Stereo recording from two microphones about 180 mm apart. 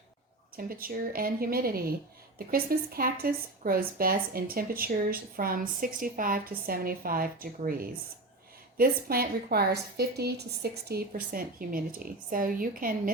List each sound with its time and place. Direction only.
0.5 s a woman's voice: 55° right (ahead or behind)